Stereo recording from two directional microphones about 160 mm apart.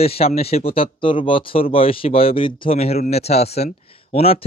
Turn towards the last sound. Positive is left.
turn(degrees=35)  # may be behind; listen again after turning